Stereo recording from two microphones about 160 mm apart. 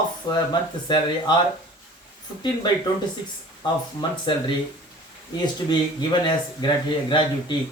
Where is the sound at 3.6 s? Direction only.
30° left (ahead or behind).